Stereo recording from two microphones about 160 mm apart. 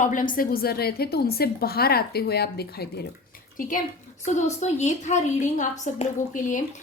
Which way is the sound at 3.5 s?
60° left (ahead or behind).